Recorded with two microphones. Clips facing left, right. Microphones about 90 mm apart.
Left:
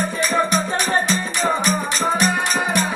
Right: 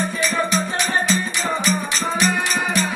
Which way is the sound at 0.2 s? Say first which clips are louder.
Left 3 dB; 45° left (ahead or behind).